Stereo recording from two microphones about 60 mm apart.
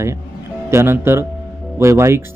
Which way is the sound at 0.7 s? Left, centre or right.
Right.